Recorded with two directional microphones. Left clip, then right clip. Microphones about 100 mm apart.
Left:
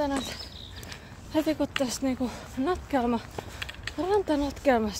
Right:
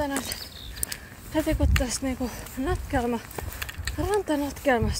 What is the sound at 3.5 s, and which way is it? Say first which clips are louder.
Pulleys: right 2 dB; 90° right.